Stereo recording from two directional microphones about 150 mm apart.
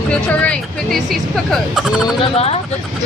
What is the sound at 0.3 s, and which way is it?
Speech, 10° left (ahead or behind).